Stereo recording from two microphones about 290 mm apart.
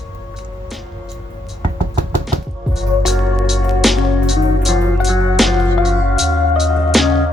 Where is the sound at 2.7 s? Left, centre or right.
Centre.